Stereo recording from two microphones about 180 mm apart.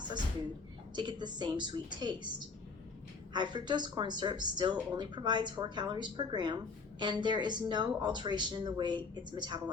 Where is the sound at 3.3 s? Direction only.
25° right (ahead or behind).